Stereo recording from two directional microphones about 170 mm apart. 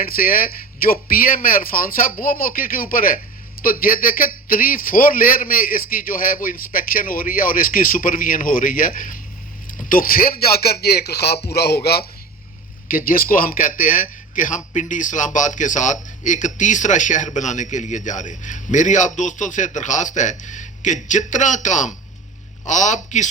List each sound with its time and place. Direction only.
0.0 s a man's voice: 55° left (ahead or behind)
12.9 s a man's voice: 55° left (ahead or behind)